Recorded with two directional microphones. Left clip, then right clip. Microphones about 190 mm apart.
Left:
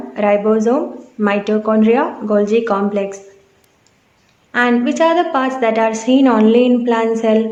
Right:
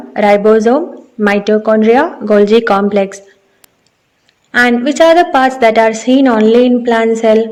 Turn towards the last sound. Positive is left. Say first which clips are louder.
# right 5 dB
turn(degrees=-25)  # may be behind; listen again after turning